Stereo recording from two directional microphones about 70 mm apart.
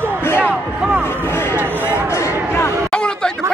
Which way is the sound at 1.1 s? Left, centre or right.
Left.